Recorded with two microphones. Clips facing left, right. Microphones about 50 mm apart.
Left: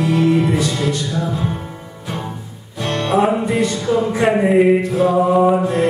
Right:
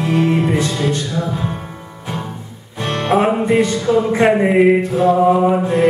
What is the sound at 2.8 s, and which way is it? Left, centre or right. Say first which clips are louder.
Music: right 1 dB; right.